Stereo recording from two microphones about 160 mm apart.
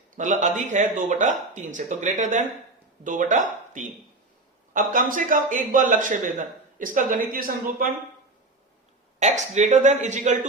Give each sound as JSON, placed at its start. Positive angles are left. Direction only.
{"t": 0.2, "sound": "speech", "side_deg": -50}
{"t": 9.1, "sound": "speech", "side_deg": -45}